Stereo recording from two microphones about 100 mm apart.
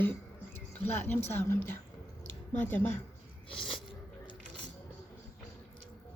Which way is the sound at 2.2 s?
20° left (ahead or behind).